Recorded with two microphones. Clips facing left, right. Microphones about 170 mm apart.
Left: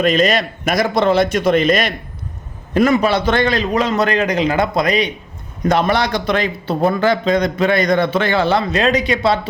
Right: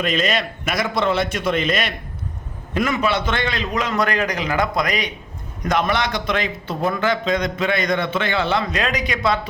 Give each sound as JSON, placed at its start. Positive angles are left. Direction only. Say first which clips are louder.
{"t": 0.0, "sound": "a man's voice", "louder": "left 6 dB", "side_deg": 40}